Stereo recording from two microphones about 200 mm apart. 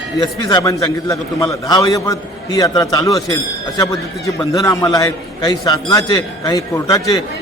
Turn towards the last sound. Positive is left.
turn(degrees=15)  # may be behind; listen again after turning